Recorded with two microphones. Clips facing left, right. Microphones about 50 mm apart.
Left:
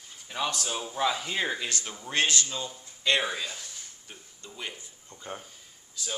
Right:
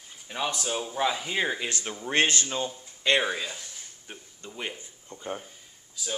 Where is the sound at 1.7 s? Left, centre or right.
Right.